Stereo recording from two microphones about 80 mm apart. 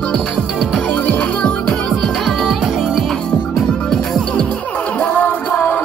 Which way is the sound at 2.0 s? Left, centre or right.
Centre.